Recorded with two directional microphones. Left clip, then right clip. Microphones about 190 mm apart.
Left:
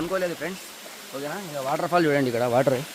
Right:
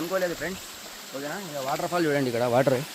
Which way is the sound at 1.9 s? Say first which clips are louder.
Left 6 dB; 50° left (ahead or behind).